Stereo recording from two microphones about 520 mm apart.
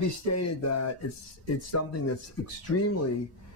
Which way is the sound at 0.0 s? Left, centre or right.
Left.